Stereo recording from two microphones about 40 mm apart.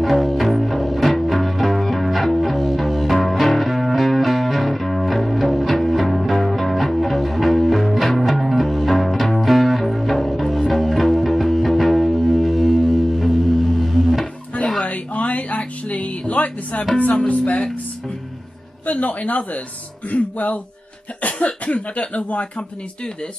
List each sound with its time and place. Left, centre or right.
0.0 s music: centre
14.8 s music: left
18.9 s a sound: left
20.1 s speech: left